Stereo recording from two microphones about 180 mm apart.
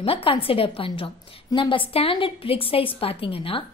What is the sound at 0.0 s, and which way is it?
A woman's voice, 30° left (ahead or behind).